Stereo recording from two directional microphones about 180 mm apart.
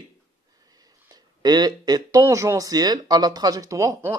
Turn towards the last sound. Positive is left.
turn(degrees=-15)  # may be behind; listen again after turning